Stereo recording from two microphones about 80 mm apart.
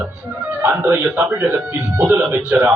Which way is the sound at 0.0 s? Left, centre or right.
Right.